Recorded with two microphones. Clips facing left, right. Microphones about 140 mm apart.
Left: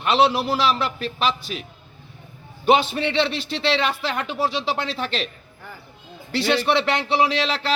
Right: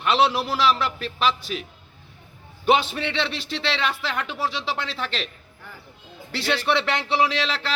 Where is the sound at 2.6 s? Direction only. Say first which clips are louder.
Left 2 dB; 40° left (ahead or behind).